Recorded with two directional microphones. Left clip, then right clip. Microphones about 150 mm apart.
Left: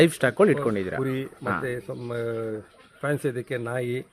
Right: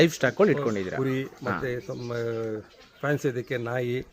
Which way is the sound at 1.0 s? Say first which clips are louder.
Left 1 dB; 10° left (ahead or behind).